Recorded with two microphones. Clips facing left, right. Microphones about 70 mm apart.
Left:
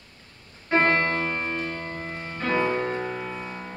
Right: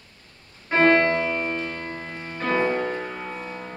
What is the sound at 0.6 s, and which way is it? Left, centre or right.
Keyboard, centre.